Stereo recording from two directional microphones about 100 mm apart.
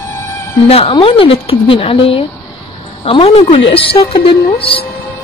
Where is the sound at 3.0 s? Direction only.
85° left; by 4.9 s 65° left (ahead or behind).